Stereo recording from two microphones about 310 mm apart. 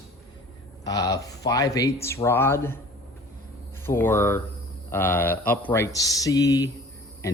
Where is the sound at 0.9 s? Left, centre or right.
Centre.